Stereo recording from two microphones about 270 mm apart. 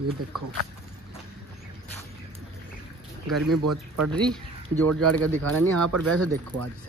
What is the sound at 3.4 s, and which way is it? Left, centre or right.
Speech, right.